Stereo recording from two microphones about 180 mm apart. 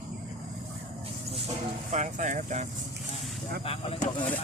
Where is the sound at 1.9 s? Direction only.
40° right (ahead or behind).